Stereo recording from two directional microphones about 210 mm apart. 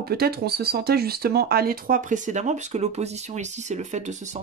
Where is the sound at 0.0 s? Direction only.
45° right (ahead or behind).